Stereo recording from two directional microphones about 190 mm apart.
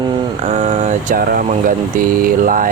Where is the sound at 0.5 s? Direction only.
35° right (ahead or behind).